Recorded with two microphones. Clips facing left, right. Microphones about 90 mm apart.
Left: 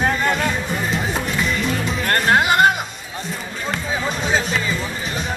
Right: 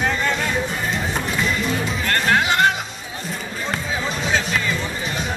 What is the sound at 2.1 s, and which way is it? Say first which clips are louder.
Music: left 3 dB; 50° left (ahead or behind).